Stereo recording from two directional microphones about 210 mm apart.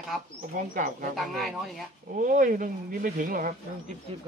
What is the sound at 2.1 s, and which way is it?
Speech, 40° right (ahead or behind).